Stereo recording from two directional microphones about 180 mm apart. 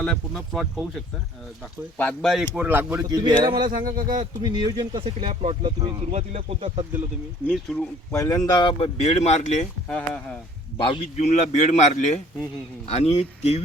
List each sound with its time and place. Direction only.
0.0 s speech: 5° left (ahead or behind)
2.6 s speech: 10° right (ahead or behind)
3.7 s speech: 50° right (ahead or behind)
4.2 s speech: 25° right (ahead or behind)
7.4 s speech: 5° left (ahead or behind)
8.1 s speech: 15° left (ahead or behind); by 9.6 s 40° left (ahead or behind)
10.8 s speech: 35° left (ahead or behind)